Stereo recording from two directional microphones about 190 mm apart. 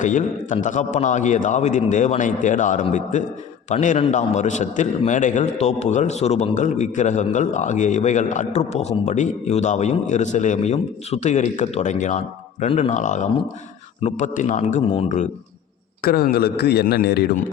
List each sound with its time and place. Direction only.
0.0 s a man's voice: 40° left (ahead or behind)
16.0 s a man's voice: 55° left (ahead or behind)